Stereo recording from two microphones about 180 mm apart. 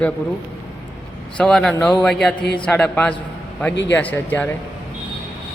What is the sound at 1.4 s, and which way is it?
A man's voice, 5° left (ahead or behind).